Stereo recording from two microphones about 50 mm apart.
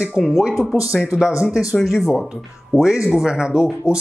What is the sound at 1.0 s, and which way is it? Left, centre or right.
Speech, centre.